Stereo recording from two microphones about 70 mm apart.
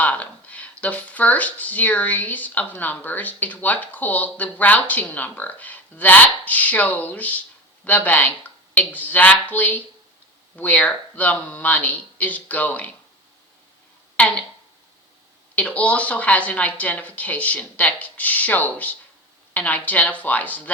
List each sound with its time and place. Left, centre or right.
0.0 s speech: left
14.2 s speech: centre
15.5 s speech: centre